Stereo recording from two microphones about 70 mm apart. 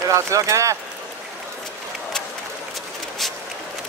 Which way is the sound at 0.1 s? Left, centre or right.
Right.